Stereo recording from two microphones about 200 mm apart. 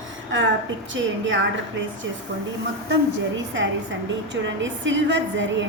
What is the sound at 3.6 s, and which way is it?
A woman's voice, 70° right (ahead or behind).